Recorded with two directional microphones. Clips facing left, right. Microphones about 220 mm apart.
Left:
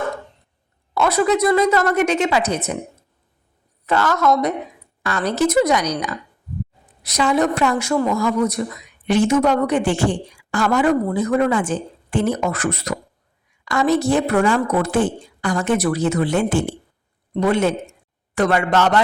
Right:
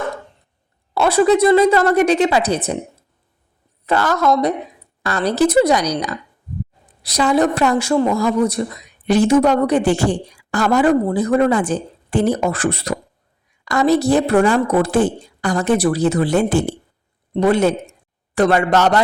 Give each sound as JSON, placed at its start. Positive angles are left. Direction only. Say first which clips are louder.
{"t": 0.9, "sound": "a woman's voice", "louder": "right 4 dB", "side_deg": -30}
{"t": 3.8, "sound": "a woman's voice", "louder": "right 1 dB", "side_deg": -35}